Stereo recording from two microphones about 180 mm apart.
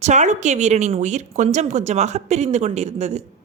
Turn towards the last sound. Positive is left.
turn(degrees=-40)  # may be behind; listen again after turning